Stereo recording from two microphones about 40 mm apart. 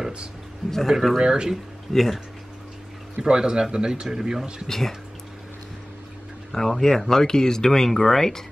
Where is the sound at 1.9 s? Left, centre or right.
Centre.